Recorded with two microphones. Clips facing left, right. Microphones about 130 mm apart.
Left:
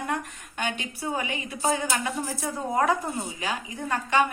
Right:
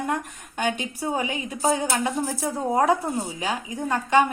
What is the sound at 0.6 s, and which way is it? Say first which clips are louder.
A woman's voice: right 4 dB; 35° right (ahead or behind).